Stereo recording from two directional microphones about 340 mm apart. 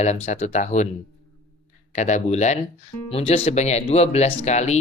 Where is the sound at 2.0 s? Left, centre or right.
Left.